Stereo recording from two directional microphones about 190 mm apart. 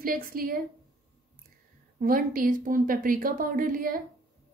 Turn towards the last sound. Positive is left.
turn(degrees=-45)  # may be behind; listen again after turning